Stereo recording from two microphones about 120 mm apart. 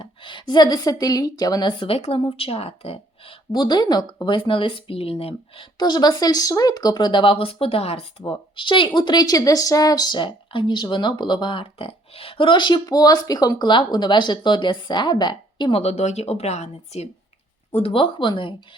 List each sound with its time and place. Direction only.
0.0 s a woman's voice: 45° left (ahead or behind)
3.5 s a woman's voice: 40° left (ahead or behind); by 5.6 s 55° left (ahead or behind)
5.7 s speech: 35° left (ahead or behind)
15.8 s speech: 65° left (ahead or behind)
17.7 s a woman's voice: 55° left (ahead or behind)